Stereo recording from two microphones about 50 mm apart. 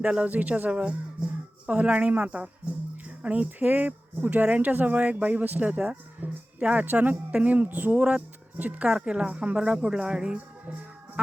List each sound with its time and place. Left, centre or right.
0.3 s speech: right
6.6 s speech: right
8.9 s speech: centre